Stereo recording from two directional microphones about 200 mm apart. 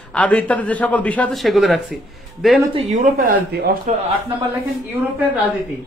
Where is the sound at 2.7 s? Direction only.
40° right (ahead or behind).